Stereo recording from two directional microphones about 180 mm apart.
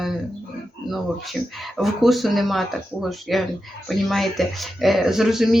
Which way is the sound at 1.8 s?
Centre (ahead or behind).